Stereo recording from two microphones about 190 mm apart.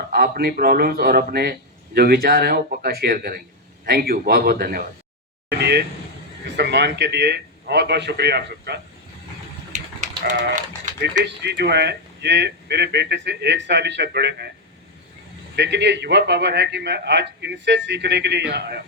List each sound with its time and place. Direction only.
0.1 s speech: 55° right (ahead or behind)
5.5 s a sound: 60° right (ahead or behind)
6.6 s a man's voice: 65° right (ahead or behind)
9.7 s a sound: 40° right (ahead or behind)
11.2 s a man's voice: 60° right (ahead or behind)
15.5 s a man's voice: 65° right (ahead or behind)